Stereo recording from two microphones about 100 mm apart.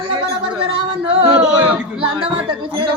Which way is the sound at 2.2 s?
55° right (ahead or behind).